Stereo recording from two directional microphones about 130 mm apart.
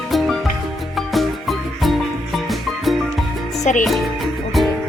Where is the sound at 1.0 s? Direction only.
Centre (ahead or behind).